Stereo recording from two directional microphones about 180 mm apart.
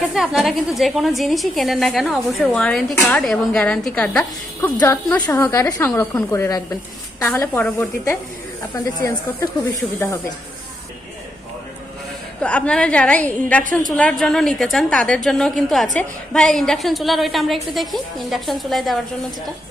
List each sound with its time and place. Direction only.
0.1 s a woman's voice: centre (ahead or behind); by 9.1 s 20° left (ahead or behind)
9.8 s a woman's voice: 10° left (ahead or behind)
12.4 s a woman's voice: 5° left (ahead or behind)